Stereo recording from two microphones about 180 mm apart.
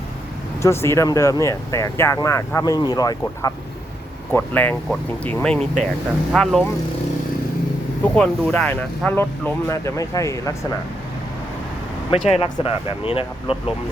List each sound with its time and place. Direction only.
0.6 s speech: 15° left (ahead or behind)
4.3 s speech: 10° left (ahead or behind)
8.0 s speech: 5° left (ahead or behind)
12.3 s speech: 30° left (ahead or behind)